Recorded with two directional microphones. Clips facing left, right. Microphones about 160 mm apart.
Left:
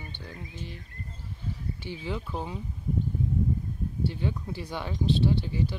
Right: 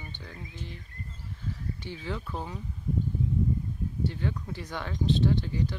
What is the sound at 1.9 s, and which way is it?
Speech, 15° left (ahead or behind).